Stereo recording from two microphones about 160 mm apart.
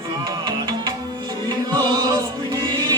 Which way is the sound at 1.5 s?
25° right (ahead or behind).